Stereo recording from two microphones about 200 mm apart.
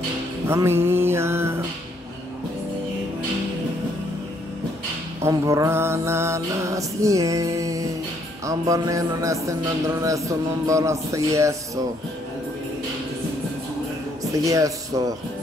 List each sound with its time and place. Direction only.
0.5 s music: 10° right (ahead or behind)
5.2 s music: 15° right (ahead or behind)
14.3 s music: 15° right (ahead or behind)